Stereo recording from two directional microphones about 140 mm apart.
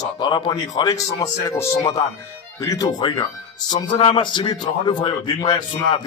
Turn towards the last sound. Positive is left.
turn(degrees=35)  # may be behind; listen again after turning